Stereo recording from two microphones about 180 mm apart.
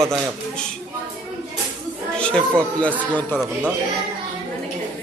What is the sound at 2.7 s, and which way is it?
Speech, 10° left (ahead or behind).